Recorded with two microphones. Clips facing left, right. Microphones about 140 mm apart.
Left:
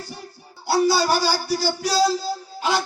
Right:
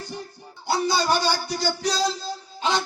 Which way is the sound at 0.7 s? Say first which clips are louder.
Left 4 dB; 20° right (ahead or behind).